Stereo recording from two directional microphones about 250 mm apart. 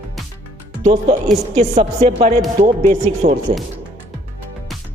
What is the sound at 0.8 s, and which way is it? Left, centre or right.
Speech, right.